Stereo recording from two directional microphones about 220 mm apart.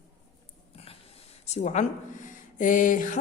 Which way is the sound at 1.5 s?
30° left (ahead or behind).